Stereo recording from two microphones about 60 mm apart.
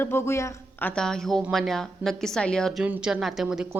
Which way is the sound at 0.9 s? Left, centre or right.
Centre.